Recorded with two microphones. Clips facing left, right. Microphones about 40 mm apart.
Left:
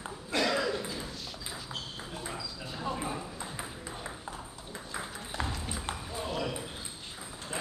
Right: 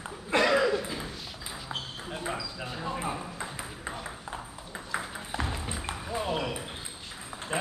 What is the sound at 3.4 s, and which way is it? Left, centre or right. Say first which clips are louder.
Ping: right 3 dB; right.